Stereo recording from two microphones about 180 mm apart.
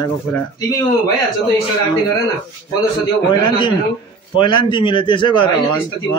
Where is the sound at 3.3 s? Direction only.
25° left (ahead or behind).